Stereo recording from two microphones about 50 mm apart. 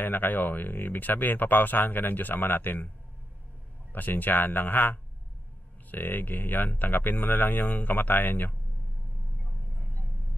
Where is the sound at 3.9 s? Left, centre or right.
Left.